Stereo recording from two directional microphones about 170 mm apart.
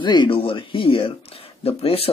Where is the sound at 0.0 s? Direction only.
25° left (ahead or behind).